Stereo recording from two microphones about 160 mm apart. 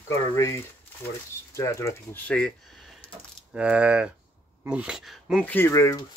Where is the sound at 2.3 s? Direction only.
5° left (ahead or behind).